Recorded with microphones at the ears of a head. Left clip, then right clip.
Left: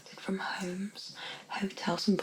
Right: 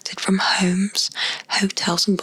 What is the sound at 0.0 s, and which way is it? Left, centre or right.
Speech, right.